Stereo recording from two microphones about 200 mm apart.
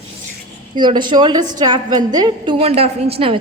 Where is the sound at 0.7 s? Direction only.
20° right (ahead or behind).